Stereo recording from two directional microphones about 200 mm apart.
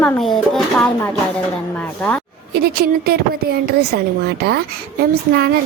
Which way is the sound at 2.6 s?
50° right (ahead or behind).